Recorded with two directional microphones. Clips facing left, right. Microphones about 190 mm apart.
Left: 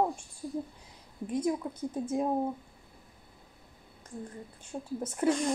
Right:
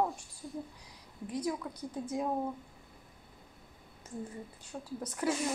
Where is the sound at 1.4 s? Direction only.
25° left (ahead or behind).